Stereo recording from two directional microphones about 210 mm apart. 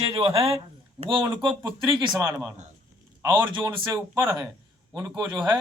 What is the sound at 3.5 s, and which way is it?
A man's voice, 25° right (ahead or behind).